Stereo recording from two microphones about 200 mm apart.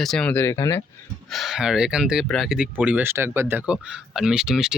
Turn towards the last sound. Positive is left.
turn(degrees=-5)  # may be behind; listen again after turning